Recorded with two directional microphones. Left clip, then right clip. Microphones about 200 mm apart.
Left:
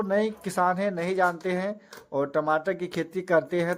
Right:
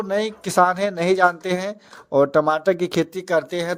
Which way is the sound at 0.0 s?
40° right (ahead or behind).